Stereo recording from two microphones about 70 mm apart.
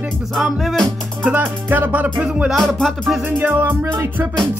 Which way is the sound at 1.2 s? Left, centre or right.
Right.